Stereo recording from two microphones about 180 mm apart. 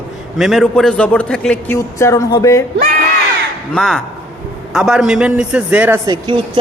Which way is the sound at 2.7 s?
55° right (ahead or behind).